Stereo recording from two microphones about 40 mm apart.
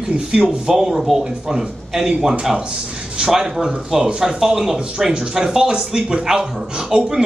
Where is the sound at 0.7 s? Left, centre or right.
Centre.